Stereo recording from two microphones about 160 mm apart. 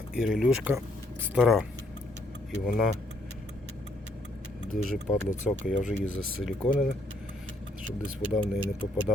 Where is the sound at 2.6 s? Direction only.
Centre (ahead or behind).